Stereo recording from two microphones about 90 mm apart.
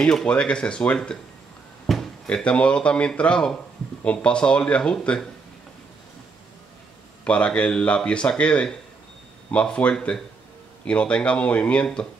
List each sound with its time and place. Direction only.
0.0 s speech: 10° left (ahead or behind)
1.9 s a sound: centre (ahead or behind)
2.2 s speech: 15° left (ahead or behind)
7.2 s speech: 15° left (ahead or behind)